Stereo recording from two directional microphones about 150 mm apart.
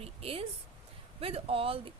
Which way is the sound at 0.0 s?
40° right (ahead or behind).